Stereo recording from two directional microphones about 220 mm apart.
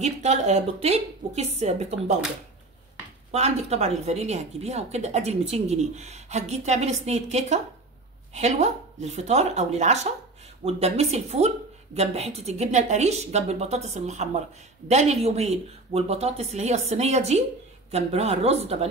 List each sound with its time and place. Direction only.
0.0 s a woman's voice: 30° right (ahead or behind)
3.3 s a woman's voice: 30° right (ahead or behind)